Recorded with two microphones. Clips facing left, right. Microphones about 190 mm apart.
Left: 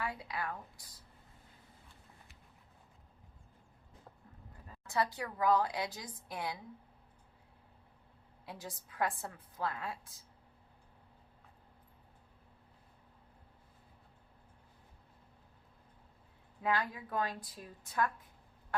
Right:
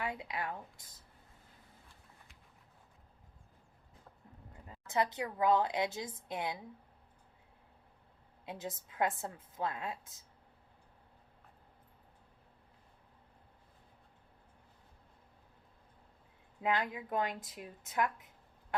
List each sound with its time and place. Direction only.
0.0 s a woman's voice: 20° right (ahead or behind)
4.5 s a woman's voice: 20° right (ahead or behind)
8.4 s a woman's voice: 25° right (ahead or behind)
16.6 s a woman's voice: 20° right (ahead or behind)
18.7 s fowl: 20° right (ahead or behind)